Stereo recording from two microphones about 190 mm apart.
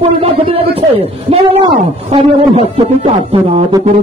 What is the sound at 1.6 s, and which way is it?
A man's voice, 30° right (ahead or behind).